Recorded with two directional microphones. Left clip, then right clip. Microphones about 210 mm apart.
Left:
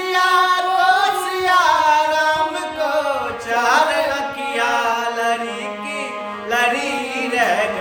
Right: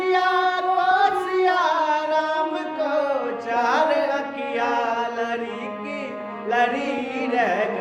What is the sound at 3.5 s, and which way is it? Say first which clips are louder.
Mantra: left 4 dB; 20° left (ahead or behind).